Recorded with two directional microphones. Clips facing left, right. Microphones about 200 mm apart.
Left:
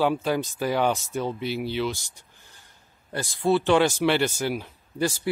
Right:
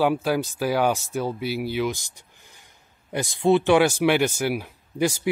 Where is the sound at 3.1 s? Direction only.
20° right (ahead or behind).